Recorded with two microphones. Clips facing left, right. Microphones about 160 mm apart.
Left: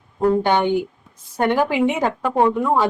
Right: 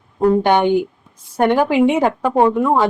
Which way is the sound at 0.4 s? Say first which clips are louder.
Right 4 dB; 15° right (ahead or behind).